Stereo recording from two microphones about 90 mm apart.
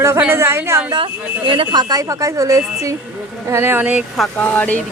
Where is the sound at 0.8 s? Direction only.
65° right (ahead or behind); by 2.9 s 35° right (ahead or behind).